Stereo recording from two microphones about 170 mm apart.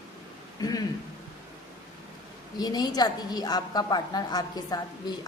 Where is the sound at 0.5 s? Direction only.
20° left (ahead or behind).